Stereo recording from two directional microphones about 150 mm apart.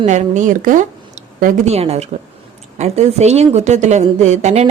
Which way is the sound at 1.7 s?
45° right (ahead or behind).